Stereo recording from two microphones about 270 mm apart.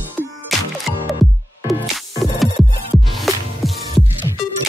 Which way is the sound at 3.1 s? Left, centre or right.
Centre.